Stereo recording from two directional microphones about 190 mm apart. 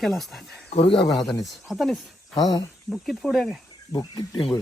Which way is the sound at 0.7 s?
30° left (ahead or behind).